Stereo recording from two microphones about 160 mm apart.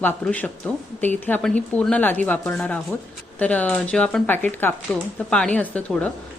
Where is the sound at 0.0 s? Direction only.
10° left (ahead or behind).